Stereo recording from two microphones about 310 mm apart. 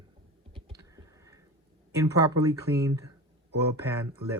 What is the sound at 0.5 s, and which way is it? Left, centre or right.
Computer keyboard, centre.